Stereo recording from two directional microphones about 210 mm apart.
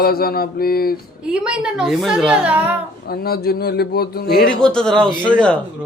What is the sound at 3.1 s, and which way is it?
Speech, 45° left (ahead or behind).